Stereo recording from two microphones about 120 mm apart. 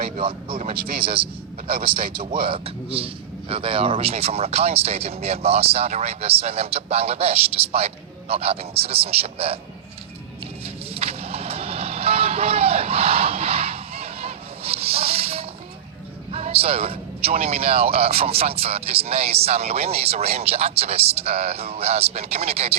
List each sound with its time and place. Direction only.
0.2 s a man's voice: 50° right (ahead or behind)
10.6 s vehicle: 55° right (ahead or behind)
16.3 s speech: 55° right (ahead or behind)